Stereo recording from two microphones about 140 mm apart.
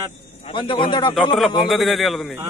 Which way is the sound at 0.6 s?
35° left (ahead or behind).